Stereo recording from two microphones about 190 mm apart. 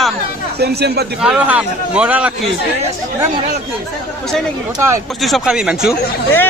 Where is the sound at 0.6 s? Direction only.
60° right (ahead or behind).